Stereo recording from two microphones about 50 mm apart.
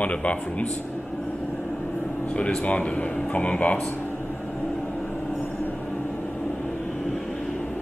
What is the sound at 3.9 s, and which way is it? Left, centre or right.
Air conditioning, left.